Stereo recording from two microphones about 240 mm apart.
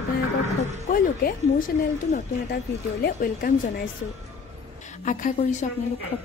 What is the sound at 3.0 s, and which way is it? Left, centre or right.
Speech, left.